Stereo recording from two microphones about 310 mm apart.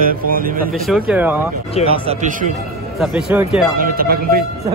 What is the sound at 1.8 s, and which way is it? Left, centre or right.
Speech, centre.